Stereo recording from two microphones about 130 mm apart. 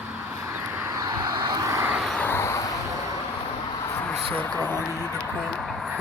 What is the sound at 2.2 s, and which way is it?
Vehicle, 15° left (ahead or behind).